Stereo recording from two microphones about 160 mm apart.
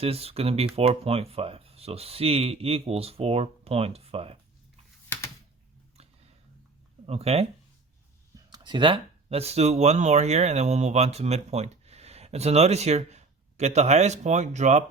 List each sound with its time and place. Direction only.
0.0 s speech: 40° right (ahead or behind)
5.0 s typing: 15° left (ahead or behind)
7.1 s speech: 40° right (ahead or behind)
8.4 s speech: 25° right (ahead or behind); by 14.8 s 45° right (ahead or behind)